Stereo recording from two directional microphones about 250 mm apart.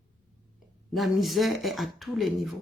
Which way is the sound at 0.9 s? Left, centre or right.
Centre.